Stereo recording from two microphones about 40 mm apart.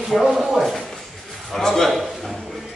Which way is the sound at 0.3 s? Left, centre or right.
Centre.